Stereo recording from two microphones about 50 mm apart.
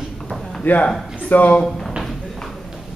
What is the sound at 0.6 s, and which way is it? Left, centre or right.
A man's voice, left.